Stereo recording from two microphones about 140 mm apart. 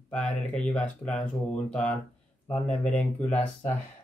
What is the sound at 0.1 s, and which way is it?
Speech, 5° left (ahead or behind).